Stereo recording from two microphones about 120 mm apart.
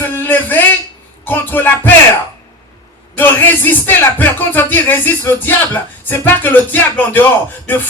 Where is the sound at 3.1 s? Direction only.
15° left (ahead or behind).